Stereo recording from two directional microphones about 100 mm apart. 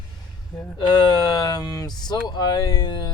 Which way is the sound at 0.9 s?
45° left (ahead or behind).